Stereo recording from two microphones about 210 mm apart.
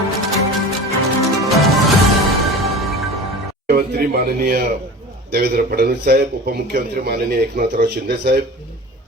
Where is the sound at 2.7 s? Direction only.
Centre (ahead or behind).